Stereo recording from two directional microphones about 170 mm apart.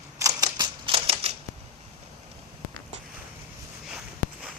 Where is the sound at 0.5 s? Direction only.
30° right (ahead or behind).